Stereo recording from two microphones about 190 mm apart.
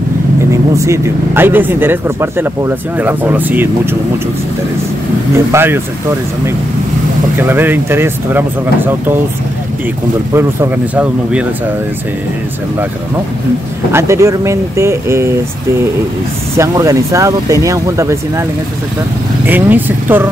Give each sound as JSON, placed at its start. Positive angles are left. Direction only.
{"t": 0.5, "sound": "speech", "side_deg": -15}
{"t": 5.3, "sound": "speech", "side_deg": -15}
{"t": 7.3, "sound": "speech", "side_deg": -10}
{"t": 10.3, "sound": "speech", "side_deg": -10}
{"t": 13.9, "sound": "speech", "side_deg": -15}
{"t": 16.5, "sound": "speech", "side_deg": -15}